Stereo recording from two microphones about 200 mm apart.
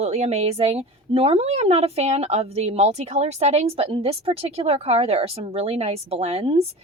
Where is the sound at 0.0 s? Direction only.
35° right (ahead or behind).